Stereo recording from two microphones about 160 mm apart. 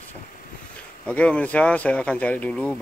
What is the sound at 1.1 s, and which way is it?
Speech, 10° left (ahead or behind).